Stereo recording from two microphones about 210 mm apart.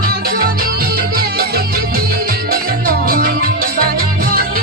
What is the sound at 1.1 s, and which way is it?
Music, 45° right (ahead or behind).